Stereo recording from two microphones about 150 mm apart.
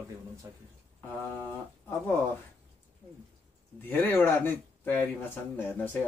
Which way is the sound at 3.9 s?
10° left (ahead or behind).